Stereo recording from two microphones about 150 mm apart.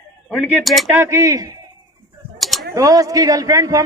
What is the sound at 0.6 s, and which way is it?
Speech, centre (ahead or behind).